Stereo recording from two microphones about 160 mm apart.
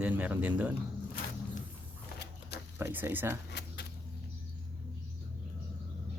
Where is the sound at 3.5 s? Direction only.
90° left.